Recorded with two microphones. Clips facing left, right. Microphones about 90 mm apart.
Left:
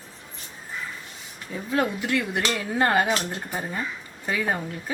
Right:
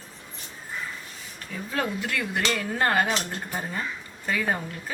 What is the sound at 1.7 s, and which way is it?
A woman's voice, 15° left (ahead or behind).